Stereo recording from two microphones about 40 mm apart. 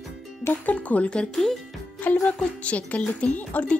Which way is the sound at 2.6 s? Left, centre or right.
Left.